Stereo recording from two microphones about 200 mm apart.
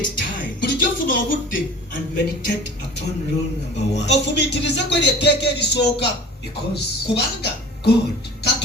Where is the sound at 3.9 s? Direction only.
60° left (ahead or behind).